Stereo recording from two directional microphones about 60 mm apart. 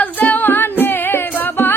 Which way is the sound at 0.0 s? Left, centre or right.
Left.